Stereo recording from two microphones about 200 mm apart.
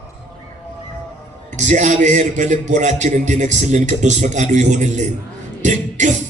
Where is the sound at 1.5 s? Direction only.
40° right (ahead or behind).